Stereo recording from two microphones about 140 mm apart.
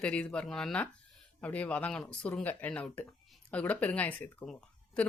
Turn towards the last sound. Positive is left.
turn(degrees=10)  # may be behind; listen again after turning